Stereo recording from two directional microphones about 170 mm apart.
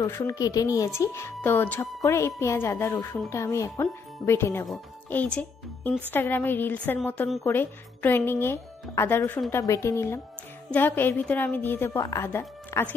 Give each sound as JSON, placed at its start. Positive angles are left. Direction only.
{"t": 0.0, "sound": "a woman's voice", "side_deg": 15}